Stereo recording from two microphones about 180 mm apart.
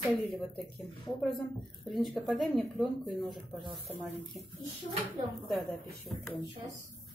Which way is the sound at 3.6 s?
25° right (ahead or behind).